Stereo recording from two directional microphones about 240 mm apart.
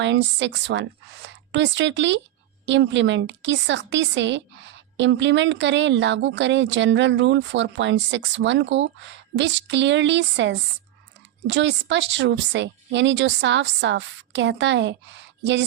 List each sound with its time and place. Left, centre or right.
0.0 s a woman's voice: right